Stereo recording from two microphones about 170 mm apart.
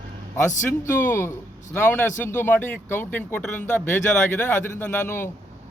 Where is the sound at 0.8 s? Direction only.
15° left (ahead or behind).